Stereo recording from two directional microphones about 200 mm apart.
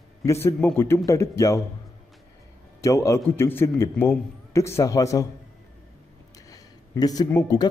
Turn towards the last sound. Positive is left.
turn(degrees=15)  # may be behind; listen again after turning